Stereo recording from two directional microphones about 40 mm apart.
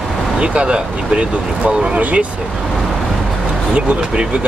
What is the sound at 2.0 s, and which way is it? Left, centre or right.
Speech, right.